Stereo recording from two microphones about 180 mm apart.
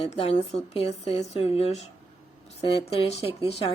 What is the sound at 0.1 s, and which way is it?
A woman's voice, 35° left (ahead or behind).